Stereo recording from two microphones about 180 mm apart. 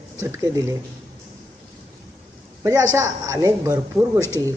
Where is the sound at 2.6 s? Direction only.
20° right (ahead or behind).